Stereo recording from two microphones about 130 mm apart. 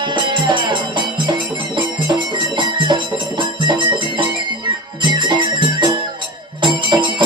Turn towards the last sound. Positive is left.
turn(degrees=-35)  # may be behind; listen again after turning